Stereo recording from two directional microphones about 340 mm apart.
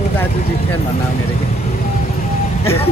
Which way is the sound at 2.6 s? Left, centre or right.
Centre.